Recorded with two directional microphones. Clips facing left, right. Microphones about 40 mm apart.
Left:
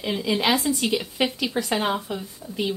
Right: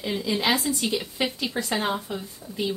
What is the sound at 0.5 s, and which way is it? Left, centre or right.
Speech, left.